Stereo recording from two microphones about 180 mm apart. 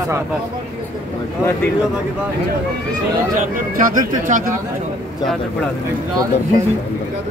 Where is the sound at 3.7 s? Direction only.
50° right (ahead or behind).